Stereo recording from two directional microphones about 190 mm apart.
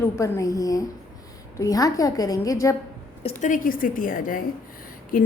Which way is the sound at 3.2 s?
35° left (ahead or behind).